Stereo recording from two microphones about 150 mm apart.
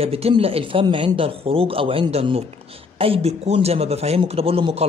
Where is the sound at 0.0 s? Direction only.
40° right (ahead or behind).